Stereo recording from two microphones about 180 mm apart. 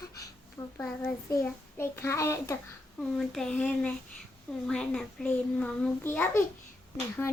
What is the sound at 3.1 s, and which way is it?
A child's voice, 5° left (ahead or behind).